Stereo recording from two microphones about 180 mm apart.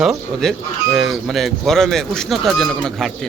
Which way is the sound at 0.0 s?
5° right (ahead or behind).